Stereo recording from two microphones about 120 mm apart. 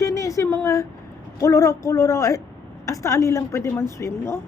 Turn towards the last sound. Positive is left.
turn(degrees=20)  # may be behind; listen again after turning